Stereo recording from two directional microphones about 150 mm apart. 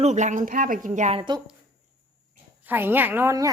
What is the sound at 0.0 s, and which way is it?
Speech, 50° right (ahead or behind).